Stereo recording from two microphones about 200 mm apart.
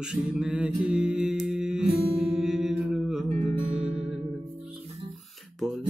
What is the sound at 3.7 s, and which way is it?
Music, 35° right (ahead or behind).